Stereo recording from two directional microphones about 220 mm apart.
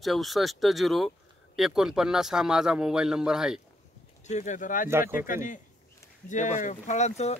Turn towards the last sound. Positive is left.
turn(degrees=30)  # may be behind; listen again after turning